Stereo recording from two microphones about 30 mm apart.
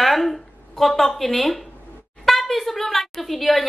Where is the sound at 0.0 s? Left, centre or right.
Centre.